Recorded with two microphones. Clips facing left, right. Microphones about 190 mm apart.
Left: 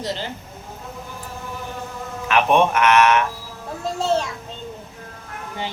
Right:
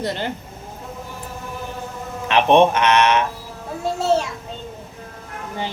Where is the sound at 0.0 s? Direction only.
60° right (ahead or behind).